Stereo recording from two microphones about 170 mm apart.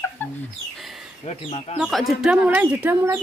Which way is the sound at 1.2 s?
35° left (ahead or behind).